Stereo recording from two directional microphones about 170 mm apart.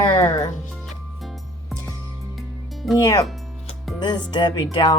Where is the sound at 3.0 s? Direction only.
20° left (ahead or behind).